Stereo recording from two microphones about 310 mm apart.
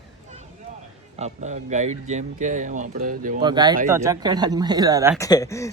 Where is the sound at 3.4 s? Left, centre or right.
Centre.